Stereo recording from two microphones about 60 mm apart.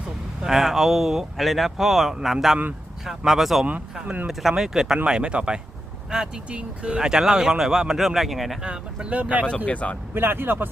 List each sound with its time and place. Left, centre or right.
0.4 s speech: centre
4.0 s speech: right
4.3 s speech: centre
8.6 s speech: centre
9.6 s speech: left
10.2 s speech: right